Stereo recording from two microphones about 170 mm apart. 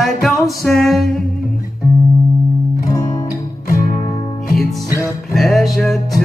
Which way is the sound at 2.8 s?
55° left (ahead or behind).